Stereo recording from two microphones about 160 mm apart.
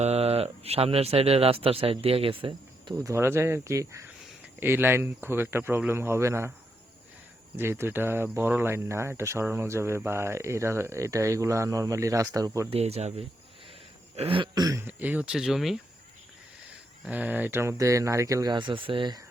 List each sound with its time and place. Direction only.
0.0 s speech: 40° right (ahead or behind)
2.9 s speech: 20° right (ahead or behind)
7.5 s speech: 15° right (ahead or behind)
12.7 s speech: 40° right (ahead or behind); by 15.8 s centre (ahead or behind)
17.1 s speech: 10° right (ahead or behind); by 19.2 s 30° right (ahead or behind)